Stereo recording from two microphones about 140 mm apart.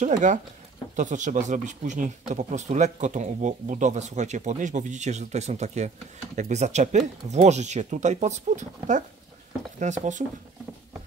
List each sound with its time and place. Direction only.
0.0 s speech: 60° right (ahead or behind)